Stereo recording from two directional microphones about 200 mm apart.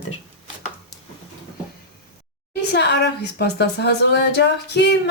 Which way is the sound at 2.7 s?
55° left (ahead or behind).